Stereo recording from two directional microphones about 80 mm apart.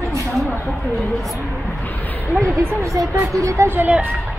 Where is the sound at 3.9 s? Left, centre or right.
Centre.